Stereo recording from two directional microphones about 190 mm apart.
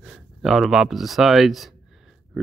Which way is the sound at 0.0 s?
Centre (ahead or behind).